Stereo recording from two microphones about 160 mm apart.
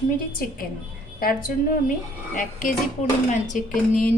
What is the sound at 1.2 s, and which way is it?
A woman's voice, 65° left (ahead or behind).